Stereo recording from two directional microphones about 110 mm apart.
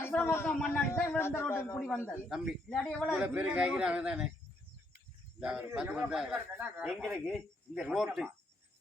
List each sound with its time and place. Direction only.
0.0 s a man's voice: 15° left (ahead or behind)
3.2 s a man's voice: 10° right (ahead or behind)
5.4 s speech: 5° right (ahead or behind)
6.3 s a man's voice: 15° right (ahead or behind)
6.8 s speech: centre (ahead or behind)